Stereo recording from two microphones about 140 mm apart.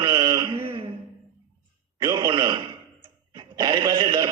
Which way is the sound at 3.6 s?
30° right (ahead or behind).